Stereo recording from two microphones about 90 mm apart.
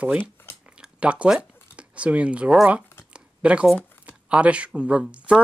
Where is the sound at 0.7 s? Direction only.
10° right (ahead or behind).